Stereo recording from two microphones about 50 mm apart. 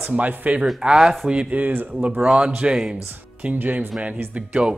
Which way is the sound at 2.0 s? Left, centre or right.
Right.